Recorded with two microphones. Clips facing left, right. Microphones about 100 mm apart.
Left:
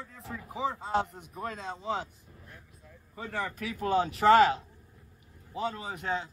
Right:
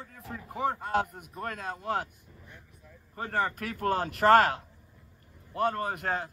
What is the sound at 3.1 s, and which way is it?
A man's voice, 45° right (ahead or behind).